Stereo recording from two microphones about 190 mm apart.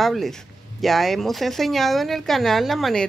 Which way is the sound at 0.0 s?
Centre (ahead or behind).